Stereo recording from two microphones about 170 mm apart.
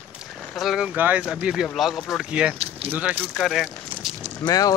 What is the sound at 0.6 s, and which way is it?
Speech, centre (ahead or behind).